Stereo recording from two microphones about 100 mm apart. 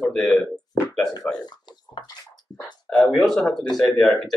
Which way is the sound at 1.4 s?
45° left (ahead or behind).